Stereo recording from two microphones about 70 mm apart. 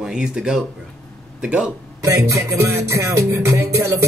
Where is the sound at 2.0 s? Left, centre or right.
Right.